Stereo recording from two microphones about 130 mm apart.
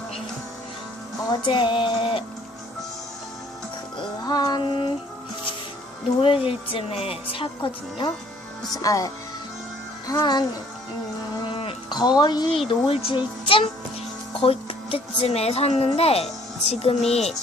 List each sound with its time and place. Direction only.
1.3 s speech: 35° left (ahead or behind)
3.9 s music: 30° left (ahead or behind)
6.2 s speech: 45° left (ahead or behind)
8.7 s speech: 25° left (ahead or behind)
10.2 s speech: 35° left (ahead or behind)
11.4 s music: 45° left (ahead or behind)
11.9 s speech: 35° left (ahead or behind); by 17.3 s 55° left (ahead or behind)